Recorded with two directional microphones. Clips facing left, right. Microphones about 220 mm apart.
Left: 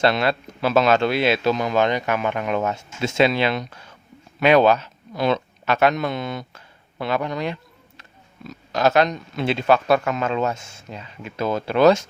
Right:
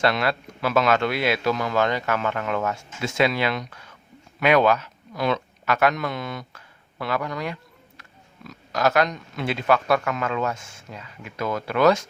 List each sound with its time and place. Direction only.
0.0 s a man's voice: 25° left (ahead or behind)